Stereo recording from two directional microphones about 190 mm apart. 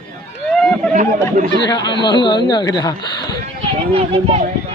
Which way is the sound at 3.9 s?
30° right (ahead or behind).